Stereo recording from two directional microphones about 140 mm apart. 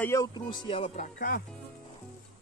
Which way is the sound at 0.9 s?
75° left (ahead or behind).